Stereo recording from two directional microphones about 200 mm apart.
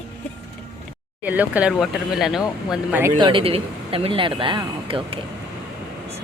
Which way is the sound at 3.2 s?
25° right (ahead or behind).